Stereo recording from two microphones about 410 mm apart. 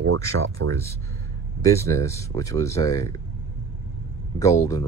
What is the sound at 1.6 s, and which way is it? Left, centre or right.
Speech, centre.